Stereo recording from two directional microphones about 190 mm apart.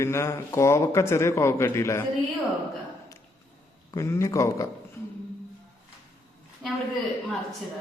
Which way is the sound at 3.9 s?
15° left (ahead or behind).